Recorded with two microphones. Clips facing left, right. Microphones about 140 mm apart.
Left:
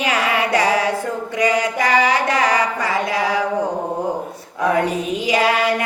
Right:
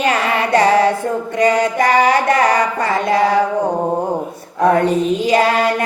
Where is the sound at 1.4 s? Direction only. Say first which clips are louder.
Right 4 dB; 50° right (ahead or behind).